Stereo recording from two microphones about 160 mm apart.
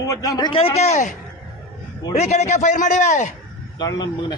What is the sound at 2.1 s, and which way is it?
A man's voice, 45° left (ahead or behind).